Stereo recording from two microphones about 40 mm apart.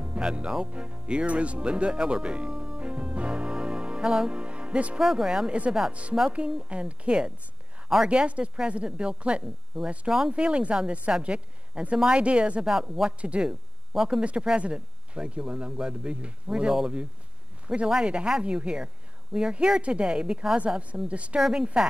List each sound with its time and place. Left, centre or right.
0.0 s speech: right
2.5 s music: centre
2.8 s music: right
5.0 s speech: centre
5.5 s speech: right
9.7 s speech: centre
10.3 s speech: right
21.4 s speech: centre